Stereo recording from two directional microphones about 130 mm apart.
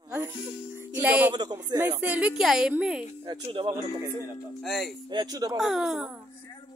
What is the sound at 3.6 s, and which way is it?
Speech, 35° right (ahead or behind).